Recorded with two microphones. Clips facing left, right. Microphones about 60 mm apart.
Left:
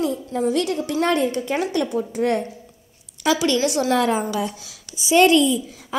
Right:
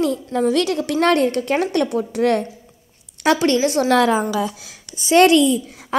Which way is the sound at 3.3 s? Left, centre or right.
Right.